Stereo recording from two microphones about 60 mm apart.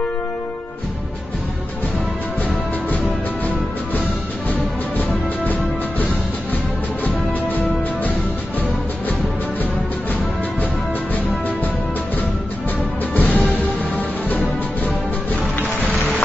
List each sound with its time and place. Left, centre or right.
4.9 s music: left
13.1 s music: left